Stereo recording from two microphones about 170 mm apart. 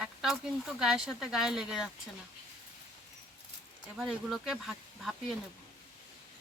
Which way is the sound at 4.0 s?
Centre (ahead or behind).